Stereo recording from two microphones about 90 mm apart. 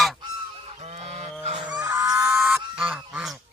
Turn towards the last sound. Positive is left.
turn(degrees=-15)  # may be behind; listen again after turning